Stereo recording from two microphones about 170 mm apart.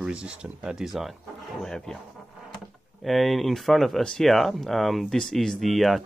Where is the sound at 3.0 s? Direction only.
Centre (ahead or behind).